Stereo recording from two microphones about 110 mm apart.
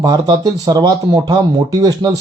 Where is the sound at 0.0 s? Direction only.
35° right (ahead or behind).